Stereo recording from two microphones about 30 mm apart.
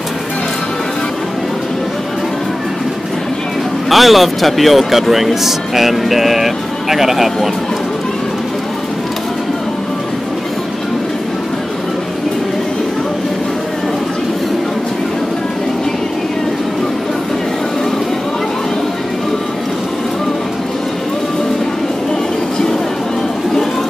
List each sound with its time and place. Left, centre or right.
3.9 s a man's voice: centre